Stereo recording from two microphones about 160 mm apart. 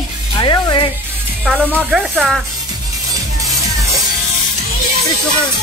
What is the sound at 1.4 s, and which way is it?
Speech, centre (ahead or behind).